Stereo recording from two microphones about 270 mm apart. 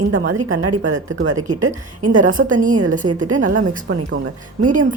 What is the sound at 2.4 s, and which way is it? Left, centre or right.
Speech, right.